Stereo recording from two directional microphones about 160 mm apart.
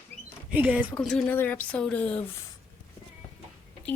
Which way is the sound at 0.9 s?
5° left (ahead or behind).